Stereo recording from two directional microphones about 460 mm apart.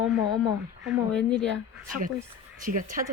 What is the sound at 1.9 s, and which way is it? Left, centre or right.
Speech, centre.